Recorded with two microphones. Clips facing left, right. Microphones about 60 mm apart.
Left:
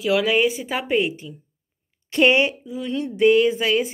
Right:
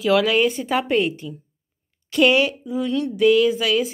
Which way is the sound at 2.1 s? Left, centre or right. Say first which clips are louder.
Even; left.